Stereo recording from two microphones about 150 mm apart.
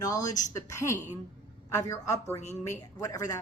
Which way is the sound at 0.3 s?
55° left (ahead or behind).